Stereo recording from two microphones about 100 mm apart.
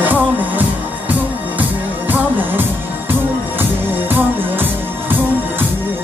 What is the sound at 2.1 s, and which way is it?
Music, 20° right (ahead or behind).